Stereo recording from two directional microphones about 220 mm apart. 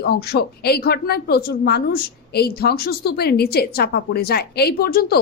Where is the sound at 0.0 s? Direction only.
45° left (ahead or behind).